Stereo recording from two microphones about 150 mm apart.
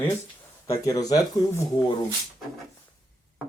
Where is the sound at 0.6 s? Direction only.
20° left (ahead or behind).